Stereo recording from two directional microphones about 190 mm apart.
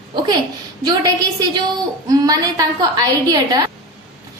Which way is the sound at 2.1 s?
20° right (ahead or behind).